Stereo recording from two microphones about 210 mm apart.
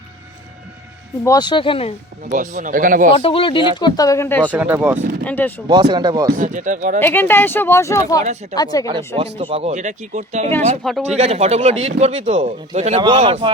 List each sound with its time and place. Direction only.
1.2 s speech: 20° left (ahead or behind)
2.2 s speech: 35° right (ahead or behind)
3.2 s speech: 25° left (ahead or behind); by 4.5 s 10° left (ahead or behind)
4.5 s speech: 5° right (ahead or behind)
5.2 s speech: 10° left (ahead or behind)
5.9 s speech: 20° right (ahead or behind)
6.3 s speech: 40° right (ahead or behind)
7.0 s speech: 10° left (ahead or behind)
8.2 s speech: 35° right (ahead or behind)
8.5 s speech: 20° left (ahead or behind)
9.1 s speech: 25° right (ahead or behind)
10.8 s speech: centre (ahead or behind)
11.2 s speech: 30° right (ahead or behind)